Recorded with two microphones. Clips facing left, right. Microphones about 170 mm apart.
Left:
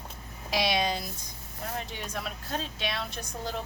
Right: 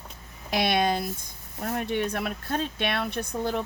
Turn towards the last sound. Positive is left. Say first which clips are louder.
# right 7 dB
turn(degrees=-60)  # may be behind; listen again after turning